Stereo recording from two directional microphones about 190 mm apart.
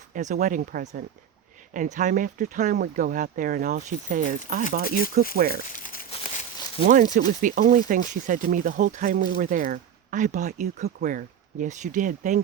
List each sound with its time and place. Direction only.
0.1 s speech: 40° right (ahead or behind)
5.6 s crumpling: 45° left (ahead or behind)
6.1 s crumpling: 30° left (ahead or behind)
6.8 s speech: 45° right (ahead or behind)